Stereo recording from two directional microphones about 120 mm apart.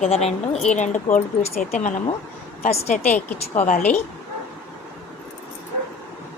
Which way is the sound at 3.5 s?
85° left.